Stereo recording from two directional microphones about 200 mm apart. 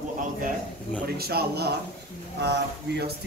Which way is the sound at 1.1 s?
50° right (ahead or behind).